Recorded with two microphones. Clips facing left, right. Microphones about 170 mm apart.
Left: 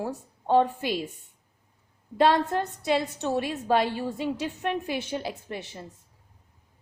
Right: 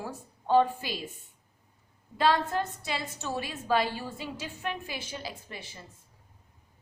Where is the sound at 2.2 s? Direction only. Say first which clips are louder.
Left 4 dB; 60° left (ahead or behind).